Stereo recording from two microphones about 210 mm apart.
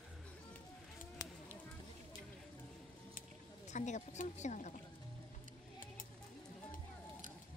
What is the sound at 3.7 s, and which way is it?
Speech, 35° left (ahead or behind).